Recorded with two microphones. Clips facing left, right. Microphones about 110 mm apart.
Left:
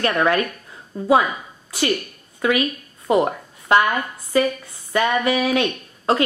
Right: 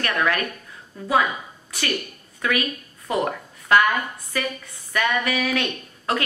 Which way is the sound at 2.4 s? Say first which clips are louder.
Left 5 dB; 25° left (ahead or behind).